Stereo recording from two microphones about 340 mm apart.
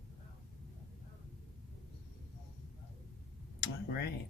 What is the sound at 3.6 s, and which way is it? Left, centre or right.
Tick-tock, left.